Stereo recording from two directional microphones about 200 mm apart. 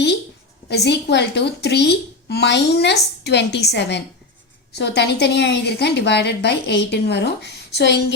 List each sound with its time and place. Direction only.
0.7 s a woman's voice: 55° left (ahead or behind)